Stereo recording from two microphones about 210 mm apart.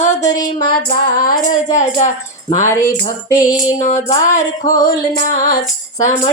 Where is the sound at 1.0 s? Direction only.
40° left (ahead or behind).